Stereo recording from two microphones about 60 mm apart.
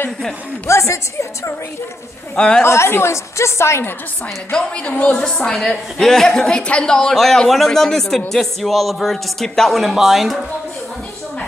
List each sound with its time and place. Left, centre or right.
0.7 s a woman's voice: left
2.3 s speech: centre
2.6 s a woman's voice: left
4.5 s speech: centre
5.4 s speech: centre